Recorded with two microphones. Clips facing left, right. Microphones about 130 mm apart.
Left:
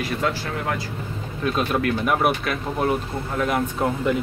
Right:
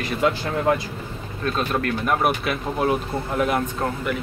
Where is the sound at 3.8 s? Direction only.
20° left (ahead or behind).